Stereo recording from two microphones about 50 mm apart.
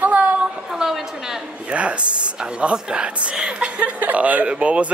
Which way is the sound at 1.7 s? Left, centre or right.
Right.